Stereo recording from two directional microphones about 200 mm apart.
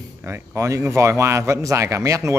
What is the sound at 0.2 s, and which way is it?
A man's voice, 15° right (ahead or behind).